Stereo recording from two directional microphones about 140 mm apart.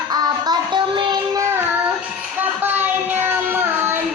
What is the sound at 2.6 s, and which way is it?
Child singing, 15° right (ahead or behind).